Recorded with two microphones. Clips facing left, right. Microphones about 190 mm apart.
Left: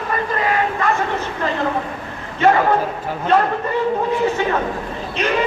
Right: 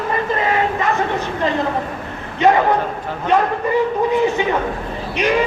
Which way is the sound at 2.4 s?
15° right (ahead or behind).